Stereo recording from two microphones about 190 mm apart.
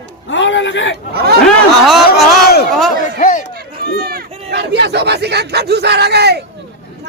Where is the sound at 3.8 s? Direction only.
50° right (ahead or behind).